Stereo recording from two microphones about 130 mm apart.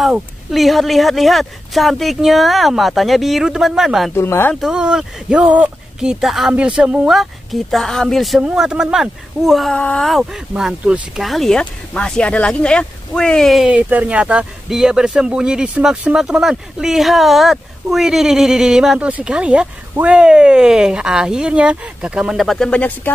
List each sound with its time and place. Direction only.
0.5 s speech: centre (ahead or behind)
4.1 s speech: 20° left (ahead or behind)
4.6 s speech: 5° right (ahead or behind); by 23.1 s 10° left (ahead or behind)